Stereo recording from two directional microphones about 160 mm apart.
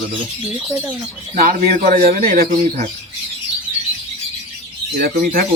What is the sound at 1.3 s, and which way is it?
Speech, 60° right (ahead or behind).